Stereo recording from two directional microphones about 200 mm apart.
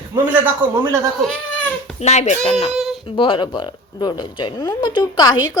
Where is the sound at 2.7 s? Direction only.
Centre (ahead or behind).